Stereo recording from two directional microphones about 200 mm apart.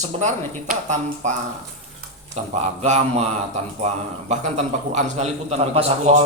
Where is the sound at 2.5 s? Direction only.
35° right (ahead or behind).